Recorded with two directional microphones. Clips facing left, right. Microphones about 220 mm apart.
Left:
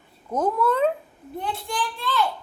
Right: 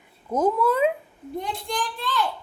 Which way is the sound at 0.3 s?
10° right (ahead or behind).